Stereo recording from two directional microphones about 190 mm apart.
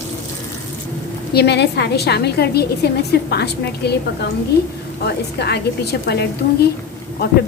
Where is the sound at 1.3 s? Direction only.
60° left (ahead or behind).